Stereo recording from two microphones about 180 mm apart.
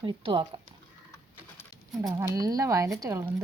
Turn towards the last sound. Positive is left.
turn(degrees=-15)  # may be behind; listen again after turning